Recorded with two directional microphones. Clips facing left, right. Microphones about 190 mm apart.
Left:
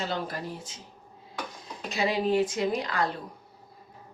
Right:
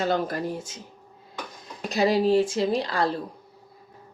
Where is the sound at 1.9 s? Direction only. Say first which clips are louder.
Right 5 dB; 35° right (ahead or behind).